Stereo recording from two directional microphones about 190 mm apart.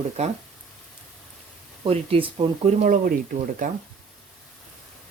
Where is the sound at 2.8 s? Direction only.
45° right (ahead or behind).